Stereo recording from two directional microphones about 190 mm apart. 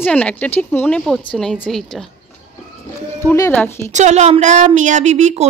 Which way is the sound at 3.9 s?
40° right (ahead or behind).